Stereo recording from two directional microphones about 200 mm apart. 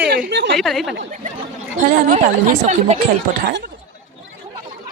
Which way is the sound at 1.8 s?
40° right (ahead or behind).